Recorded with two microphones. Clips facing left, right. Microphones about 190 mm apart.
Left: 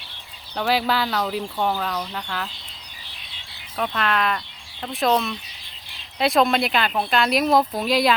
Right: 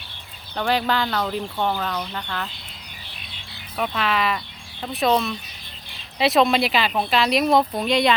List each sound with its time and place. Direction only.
0.5 s speech: 5° left (ahead or behind)
3.8 s speech: 5° right (ahead or behind)